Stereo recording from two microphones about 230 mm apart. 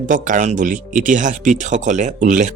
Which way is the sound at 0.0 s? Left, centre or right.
Right.